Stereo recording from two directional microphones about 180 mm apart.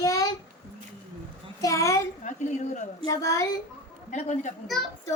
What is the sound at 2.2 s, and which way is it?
Speech, 40° left (ahead or behind).